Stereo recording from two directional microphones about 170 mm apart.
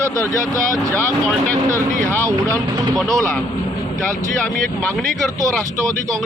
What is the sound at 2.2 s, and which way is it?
Speech, 20° right (ahead or behind).